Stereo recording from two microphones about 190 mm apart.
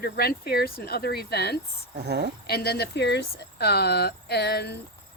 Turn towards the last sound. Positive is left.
turn(degrees=60)  # may be behind; listen again after turning